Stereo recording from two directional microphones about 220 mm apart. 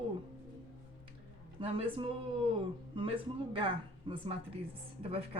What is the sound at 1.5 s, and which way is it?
A man's voice, 25° right (ahead or behind).